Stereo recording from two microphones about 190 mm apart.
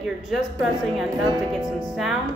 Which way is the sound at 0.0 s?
Centre (ahead or behind).